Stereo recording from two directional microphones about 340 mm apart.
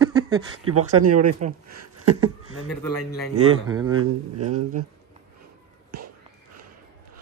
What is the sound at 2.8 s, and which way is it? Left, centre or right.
Speech, left.